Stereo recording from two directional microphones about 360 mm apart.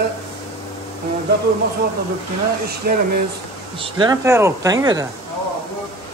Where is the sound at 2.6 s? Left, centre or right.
Right.